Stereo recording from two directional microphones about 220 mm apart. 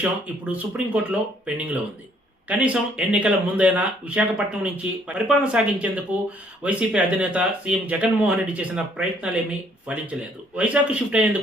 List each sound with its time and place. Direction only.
0.0 s speech: 5° right (ahead or behind)